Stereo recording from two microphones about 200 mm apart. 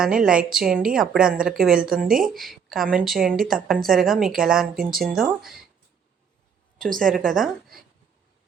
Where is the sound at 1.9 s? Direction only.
45° right (ahead or behind).